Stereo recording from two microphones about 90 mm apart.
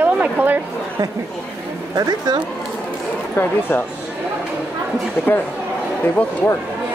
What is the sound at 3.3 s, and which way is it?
Speech, 25° left (ahead or behind).